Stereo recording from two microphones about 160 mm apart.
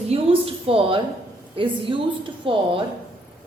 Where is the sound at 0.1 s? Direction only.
35° right (ahead or behind).